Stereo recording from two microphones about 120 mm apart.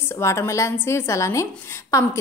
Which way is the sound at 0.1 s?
25° left (ahead or behind).